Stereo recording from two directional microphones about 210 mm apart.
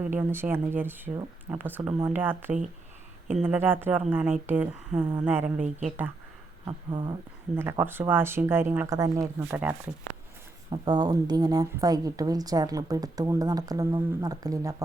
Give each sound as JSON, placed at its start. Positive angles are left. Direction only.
{"t": 0.0, "sound": "speech", "side_deg": -10}
{"t": 6.7, "sound": "speech", "side_deg": -20}
{"t": 7.5, "sound": "speech", "side_deg": -10}
{"t": 10.7, "sound": "speech", "side_deg": -20}